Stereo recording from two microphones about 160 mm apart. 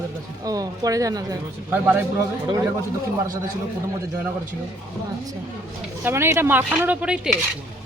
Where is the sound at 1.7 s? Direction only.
10° right (ahead or behind).